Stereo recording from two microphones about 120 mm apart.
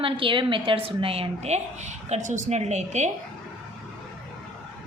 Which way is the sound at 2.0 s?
80° right.